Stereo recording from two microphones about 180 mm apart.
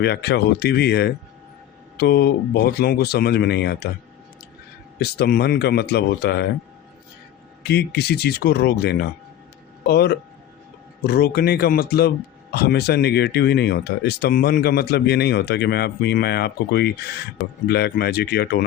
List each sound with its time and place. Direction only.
0.0 s speech: 65° left (ahead or behind)
4.9 s speech: 65° left (ahead or behind)
7.6 s speech: 65° left (ahead or behind)